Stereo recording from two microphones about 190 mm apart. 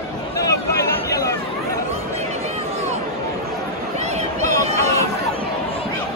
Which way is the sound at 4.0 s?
35° right (ahead or behind).